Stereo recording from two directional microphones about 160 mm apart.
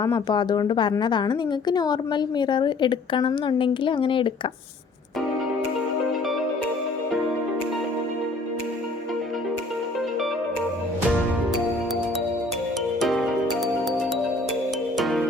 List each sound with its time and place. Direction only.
0.0 s a woman's voice: 25° left (ahead or behind)
13.0 s music: centre (ahead or behind)
14.9 s music: centre (ahead or behind)